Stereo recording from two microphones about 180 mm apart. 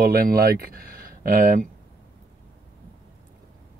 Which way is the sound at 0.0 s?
55° right (ahead or behind).